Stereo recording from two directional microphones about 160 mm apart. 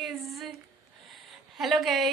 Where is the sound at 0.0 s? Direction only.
Centre (ahead or behind).